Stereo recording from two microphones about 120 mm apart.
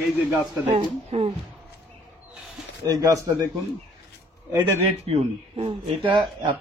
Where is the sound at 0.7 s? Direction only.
50° right (ahead or behind).